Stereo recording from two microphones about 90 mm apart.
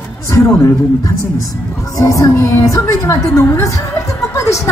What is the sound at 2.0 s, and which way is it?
A man's voice, 35° left (ahead or behind).